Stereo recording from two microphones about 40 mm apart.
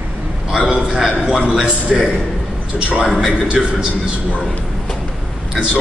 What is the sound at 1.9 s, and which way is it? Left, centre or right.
Speech, centre.